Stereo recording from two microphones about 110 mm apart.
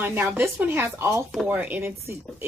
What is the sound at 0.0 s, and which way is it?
Speech, 20° right (ahead or behind).